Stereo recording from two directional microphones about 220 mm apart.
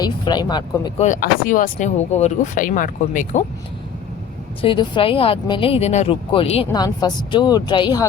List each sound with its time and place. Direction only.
0.0 s speech: 20° left (ahead or behind)
1.0 s speech: 35° left (ahead or behind)
4.6 s speech: 25° left (ahead or behind)